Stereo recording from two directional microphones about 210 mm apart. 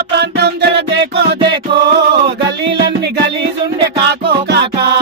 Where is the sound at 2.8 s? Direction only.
55° right (ahead or behind).